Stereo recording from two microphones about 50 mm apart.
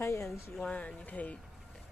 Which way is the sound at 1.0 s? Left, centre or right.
Left.